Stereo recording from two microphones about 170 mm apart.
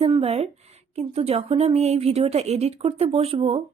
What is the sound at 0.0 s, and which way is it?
A woman's voice, 35° right (ahead or behind).